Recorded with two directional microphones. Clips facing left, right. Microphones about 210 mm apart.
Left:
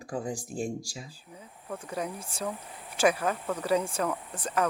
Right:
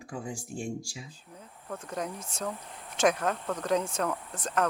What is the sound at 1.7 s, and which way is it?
Speech, 10° left (ahead or behind).